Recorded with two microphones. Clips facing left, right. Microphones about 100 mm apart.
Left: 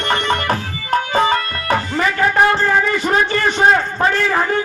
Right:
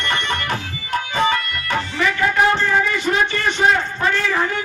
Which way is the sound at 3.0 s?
40° left (ahead or behind).